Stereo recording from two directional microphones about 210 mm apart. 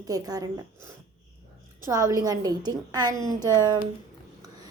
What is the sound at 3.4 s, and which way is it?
Speech, 15° left (ahead or behind).